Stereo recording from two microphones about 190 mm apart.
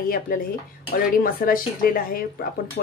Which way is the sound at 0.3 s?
50° left (ahead or behind).